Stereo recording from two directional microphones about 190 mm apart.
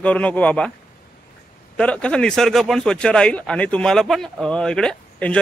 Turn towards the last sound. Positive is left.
turn(degrees=5)  # may be behind; listen again after turning